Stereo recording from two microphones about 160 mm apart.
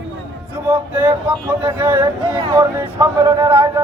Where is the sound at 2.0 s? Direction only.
30° right (ahead or behind).